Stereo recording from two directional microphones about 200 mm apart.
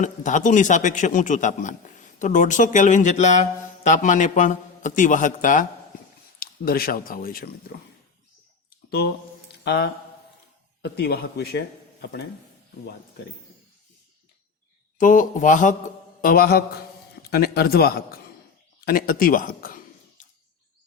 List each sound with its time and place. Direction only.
0.0 s a man's voice: 40° left (ahead or behind)
8.9 s speech: 50° left (ahead or behind)
14.9 s a man's voice: 40° left (ahead or behind)